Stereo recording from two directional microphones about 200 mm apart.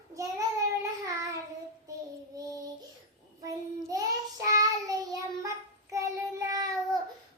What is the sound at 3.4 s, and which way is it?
Child singing, 15° right (ahead or behind).